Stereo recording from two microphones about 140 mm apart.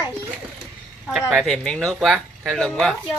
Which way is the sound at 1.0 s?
5° right (ahead or behind).